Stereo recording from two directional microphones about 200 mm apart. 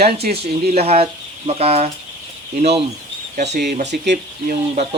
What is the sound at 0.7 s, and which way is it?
Speech, 30° right (ahead or behind).